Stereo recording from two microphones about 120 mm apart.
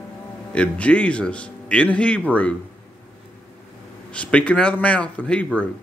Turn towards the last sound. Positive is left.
turn(degrees=10)  # may be behind; listen again after turning